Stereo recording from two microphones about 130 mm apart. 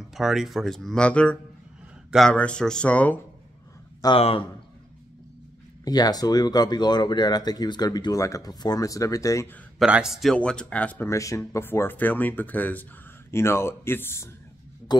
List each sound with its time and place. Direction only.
0.1 s speech: centre (ahead or behind)
2.0 s a sound: centre (ahead or behind)
2.3 s speech: 10° left (ahead or behind)
4.2 s a man's voice: 50° left (ahead or behind)
5.9 s speech: 30° left (ahead or behind)
9.8 s speech: 5° right (ahead or behind); by 11.1 s 10° left (ahead or behind)
11.1 s speech: 25° left (ahead or behind)
14.9 s a sound: 35° left (ahead or behind)